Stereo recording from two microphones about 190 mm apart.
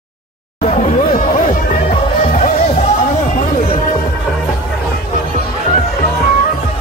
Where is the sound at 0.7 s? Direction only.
40° left (ahead or behind).